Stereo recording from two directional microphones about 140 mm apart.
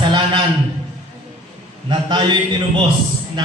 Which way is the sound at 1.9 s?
30° right (ahead or behind).